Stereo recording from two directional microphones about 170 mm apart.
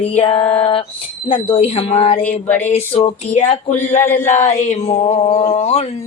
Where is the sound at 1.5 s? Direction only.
35° left (ahead or behind).